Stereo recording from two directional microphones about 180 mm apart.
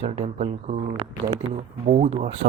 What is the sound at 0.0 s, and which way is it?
Speech, 40° right (ahead or behind).